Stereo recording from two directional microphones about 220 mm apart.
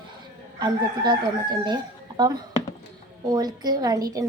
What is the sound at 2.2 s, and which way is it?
A woman's voice, 20° right (ahead or behind).